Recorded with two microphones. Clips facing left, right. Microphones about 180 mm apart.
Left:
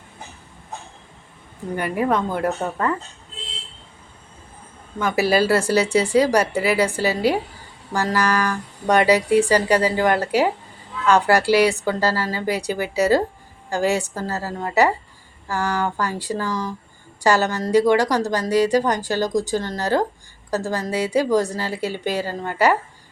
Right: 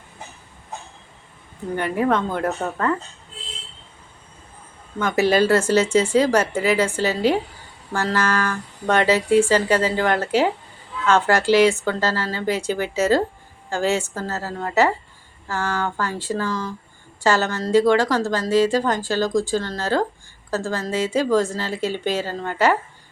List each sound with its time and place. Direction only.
1.7 s a woman's voice: 10° left (ahead or behind)
4.9 s a woman's voice: 10° left (ahead or behind)